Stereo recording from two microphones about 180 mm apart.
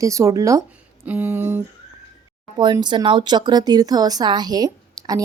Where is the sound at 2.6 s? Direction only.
25° right (ahead or behind).